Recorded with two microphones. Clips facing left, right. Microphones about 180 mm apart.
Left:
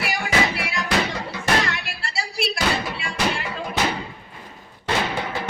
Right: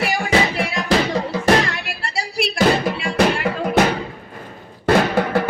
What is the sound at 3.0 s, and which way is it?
Music, 60° right (ahead or behind).